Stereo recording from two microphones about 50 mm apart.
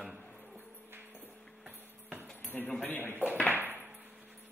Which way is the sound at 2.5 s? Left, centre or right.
Left.